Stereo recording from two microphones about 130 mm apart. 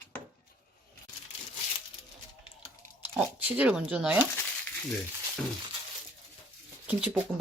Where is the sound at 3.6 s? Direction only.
10° right (ahead or behind).